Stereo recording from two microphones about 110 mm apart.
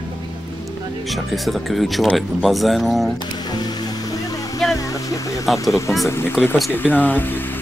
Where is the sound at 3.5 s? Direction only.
40° left (ahead or behind).